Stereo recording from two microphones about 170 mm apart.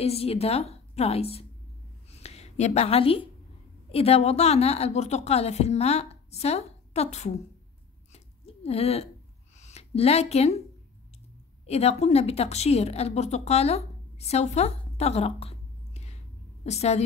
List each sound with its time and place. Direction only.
0.0 s a woman's voice: 35° left (ahead or behind)
2.0 s a sound: 40° left (ahead or behind)
3.9 s a woman's voice: 35° left (ahead or behind)
8.1 s a sound: 35° left (ahead or behind)
9.6 s speech: 40° left (ahead or behind)
11.6 s a woman's voice: 35° left (ahead or behind)